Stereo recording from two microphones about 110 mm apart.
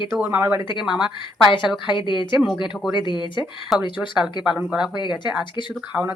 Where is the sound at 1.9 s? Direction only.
45° left (ahead or behind).